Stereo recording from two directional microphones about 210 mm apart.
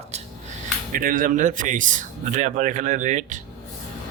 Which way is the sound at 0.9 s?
40° right (ahead or behind).